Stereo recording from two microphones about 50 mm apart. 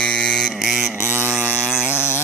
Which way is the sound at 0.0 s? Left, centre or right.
Centre.